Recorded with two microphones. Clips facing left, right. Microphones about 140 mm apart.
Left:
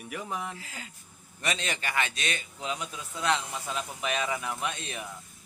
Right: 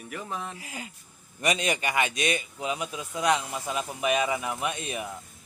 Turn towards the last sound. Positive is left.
turn(degrees=-10)  # may be behind; listen again after turning